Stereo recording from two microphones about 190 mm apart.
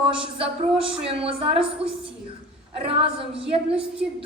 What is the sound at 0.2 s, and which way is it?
A woman's voice, 30° right (ahead or behind).